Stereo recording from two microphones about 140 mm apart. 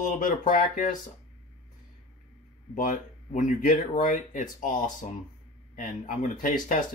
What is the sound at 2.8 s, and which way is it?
Speech, 70° left (ahead or behind).